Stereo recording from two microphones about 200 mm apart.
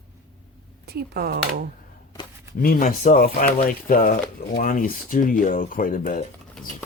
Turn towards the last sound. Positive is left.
turn(degrees=40)  # may be behind; listen again after turning